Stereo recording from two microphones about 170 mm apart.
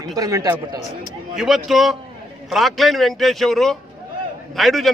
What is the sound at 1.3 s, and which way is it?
A man's voice, centre (ahead or behind).